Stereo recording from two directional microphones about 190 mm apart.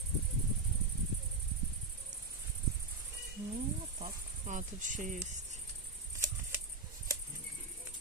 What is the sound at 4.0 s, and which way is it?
Cricket, 40° right (ahead or behind).